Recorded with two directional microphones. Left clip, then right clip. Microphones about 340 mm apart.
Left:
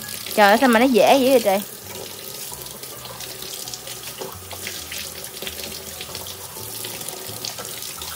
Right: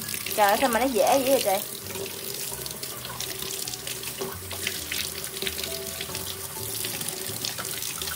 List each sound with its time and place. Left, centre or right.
0.4 s speech: left